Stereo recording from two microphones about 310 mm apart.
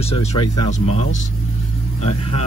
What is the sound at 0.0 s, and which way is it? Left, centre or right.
Speech, centre.